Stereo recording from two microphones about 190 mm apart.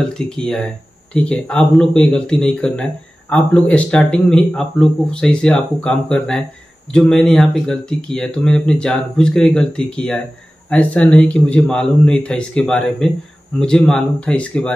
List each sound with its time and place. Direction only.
0.1 s speech: 5° left (ahead or behind)